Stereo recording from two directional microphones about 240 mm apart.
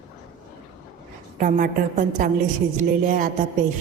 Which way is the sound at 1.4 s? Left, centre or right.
Right.